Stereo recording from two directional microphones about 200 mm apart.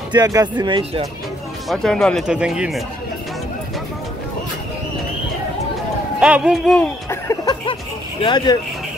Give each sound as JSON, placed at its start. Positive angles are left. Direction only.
{"t": 0.1, "sound": "speech", "side_deg": -20}
{"t": 1.7, "sound": "speech", "side_deg": 0}
{"t": 6.1, "sound": "speech", "side_deg": -5}